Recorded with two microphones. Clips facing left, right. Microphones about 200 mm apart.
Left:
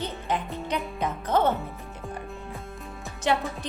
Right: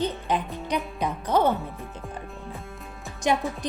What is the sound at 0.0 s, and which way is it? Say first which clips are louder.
Music: right 3 dB; 15° right (ahead or behind).